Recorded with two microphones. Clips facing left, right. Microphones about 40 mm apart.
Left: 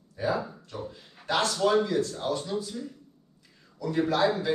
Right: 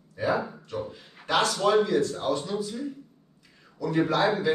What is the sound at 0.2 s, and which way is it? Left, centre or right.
A man's voice, right.